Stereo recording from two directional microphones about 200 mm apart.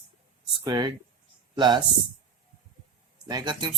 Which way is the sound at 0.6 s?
20° right (ahead or behind).